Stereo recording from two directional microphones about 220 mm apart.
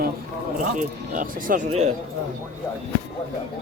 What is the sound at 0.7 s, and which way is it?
Speech, 35° right (ahead or behind).